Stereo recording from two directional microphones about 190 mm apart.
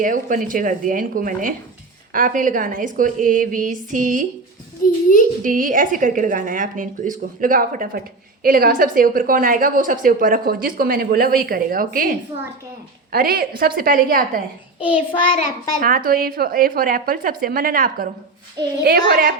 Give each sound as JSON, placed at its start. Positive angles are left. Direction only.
{"t": 0.0, "sound": "a woman's voice", "side_deg": -45}
{"t": 5.4, "sound": "a woman's voice", "side_deg": -45}
{"t": 14.8, "sound": "child singing", "side_deg": -5}
{"t": 15.8, "sound": "a woman's voice", "side_deg": -50}